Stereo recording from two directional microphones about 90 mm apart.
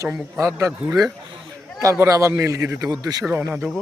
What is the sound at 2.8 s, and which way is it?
Speech, 45° right (ahead or behind).